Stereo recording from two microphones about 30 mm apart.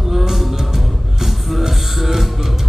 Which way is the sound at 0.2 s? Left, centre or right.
Centre.